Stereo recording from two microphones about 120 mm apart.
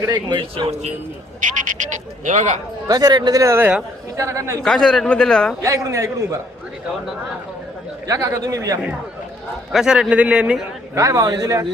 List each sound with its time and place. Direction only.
0.0 s speech: 35° right (ahead or behind)
0.7 s speech: 65° right (ahead or behind)
1.4 s speech: 90° right
2.8 s a man's voice: 35° right (ahead or behind)
4.6 s a man's voice: 5° left (ahead or behind)
5.6 s a man's voice: 25° right (ahead or behind)
8.0 s a man's voice: 30° right (ahead or behind)
9.7 s a man's voice: 5° right (ahead or behind)
10.9 s a man's voice: 30° right (ahead or behind)